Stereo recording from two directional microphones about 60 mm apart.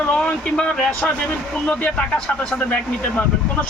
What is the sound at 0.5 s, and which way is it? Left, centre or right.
Speech, centre.